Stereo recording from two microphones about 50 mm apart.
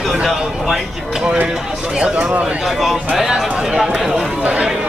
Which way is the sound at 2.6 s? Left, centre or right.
Centre.